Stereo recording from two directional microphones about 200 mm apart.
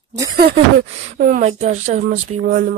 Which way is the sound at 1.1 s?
40° right (ahead or behind).